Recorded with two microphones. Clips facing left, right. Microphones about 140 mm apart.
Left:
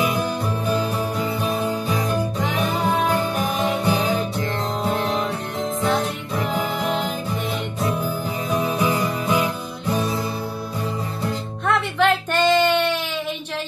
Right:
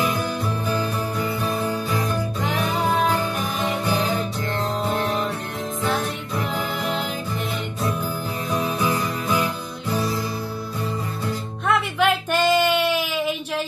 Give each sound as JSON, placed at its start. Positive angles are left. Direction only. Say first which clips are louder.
{"t": 0.0, "sound": "music", "louder": "left 2 dB", "side_deg": 15}
{"t": 2.4, "sound": "music", "louder": "right 2 dB", "side_deg": 0}
{"t": 6.5, "sound": "music", "louder": "left 4 dB", "side_deg": 0}
{"t": 8.5, "sound": "music", "louder": "left 2 dB", "side_deg": 10}
{"t": 11.6, "sound": "music", "louder": "left 1 dB", "side_deg": -5}